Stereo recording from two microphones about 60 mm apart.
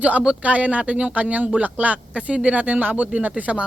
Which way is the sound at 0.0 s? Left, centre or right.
Centre.